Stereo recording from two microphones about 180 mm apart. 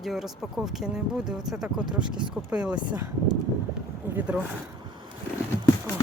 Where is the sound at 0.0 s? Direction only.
Centre (ahead or behind).